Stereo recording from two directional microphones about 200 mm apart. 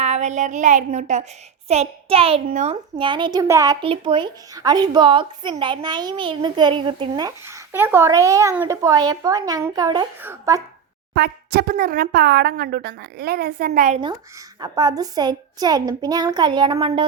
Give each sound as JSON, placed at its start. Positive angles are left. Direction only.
{"t": 0.0, "sound": "a woman's voice", "side_deg": -35}
{"t": 2.9, "sound": "a woman's voice", "side_deg": -25}
{"t": 11.1, "sound": "speech", "side_deg": -50}
{"t": 14.6, "sound": "speech", "side_deg": -20}